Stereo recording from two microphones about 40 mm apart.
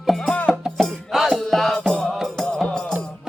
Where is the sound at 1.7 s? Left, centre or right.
Left.